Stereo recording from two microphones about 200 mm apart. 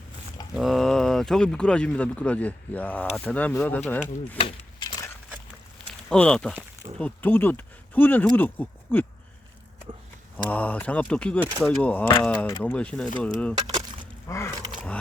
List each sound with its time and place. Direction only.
0.5 s speech: centre (ahead or behind)
4.4 s a sound: 25° left (ahead or behind)
6.1 s speech: 5° left (ahead or behind)
10.3 s speech: 5° left (ahead or behind)
13.6 s a sound: 20° right (ahead or behind)
14.3 s speech: 15° left (ahead or behind)